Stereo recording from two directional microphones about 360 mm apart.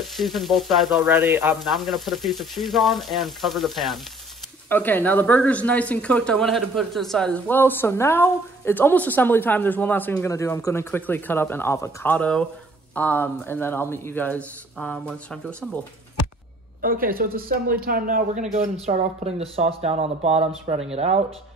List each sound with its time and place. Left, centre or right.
0.0 s speech: centre
16.8 s speech: right